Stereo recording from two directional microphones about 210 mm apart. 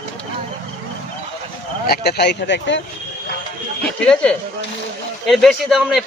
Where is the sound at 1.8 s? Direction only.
50° left (ahead or behind).